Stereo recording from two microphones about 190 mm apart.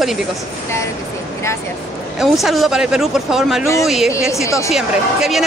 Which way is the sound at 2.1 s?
Centre (ahead or behind).